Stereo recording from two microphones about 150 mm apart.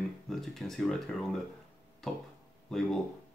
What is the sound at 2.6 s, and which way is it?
Speech, 5° left (ahead or behind).